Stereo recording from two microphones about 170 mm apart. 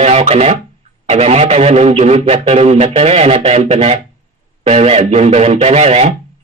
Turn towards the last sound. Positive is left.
turn(degrees=-40)  # may be behind; listen again after turning